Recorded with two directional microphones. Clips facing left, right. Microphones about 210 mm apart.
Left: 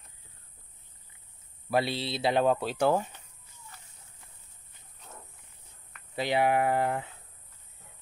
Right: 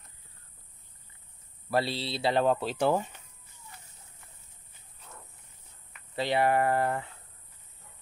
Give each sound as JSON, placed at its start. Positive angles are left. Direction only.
{"t": 1.8, "sound": "speech", "side_deg": 20}
{"t": 2.4, "sound": "speech", "side_deg": 5}
{"t": 2.8, "sound": "speech", "side_deg": -5}
{"t": 6.1, "sound": "speech", "side_deg": 10}